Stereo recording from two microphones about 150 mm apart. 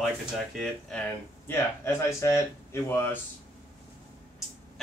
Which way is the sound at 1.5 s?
15° left (ahead or behind).